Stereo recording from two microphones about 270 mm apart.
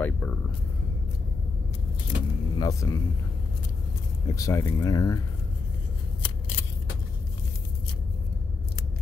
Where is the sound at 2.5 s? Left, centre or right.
Centre.